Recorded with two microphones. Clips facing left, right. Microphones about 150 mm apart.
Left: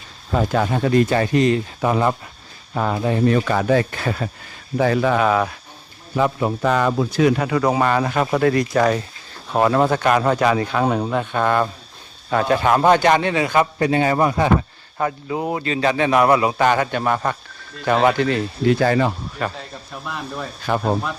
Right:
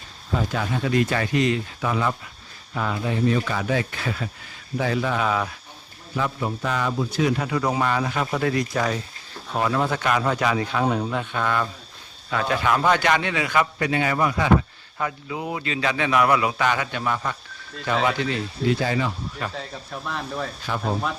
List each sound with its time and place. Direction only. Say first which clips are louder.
0.3 s a man's voice: left 6 dB; 55° left (ahead or behind)
19.5 s speech: right 1 dB; 5° left (ahead or behind)
20.7 s speech: left 8 dB; 55° left (ahead or behind)